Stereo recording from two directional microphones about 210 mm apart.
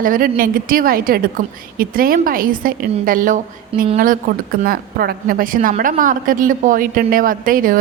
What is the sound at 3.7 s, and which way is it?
Speech, 25° right (ahead or behind).